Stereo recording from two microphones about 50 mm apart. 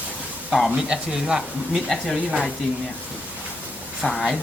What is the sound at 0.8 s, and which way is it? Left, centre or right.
Speech, centre.